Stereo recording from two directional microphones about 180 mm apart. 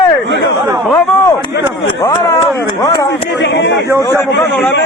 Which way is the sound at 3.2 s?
70° left (ahead or behind).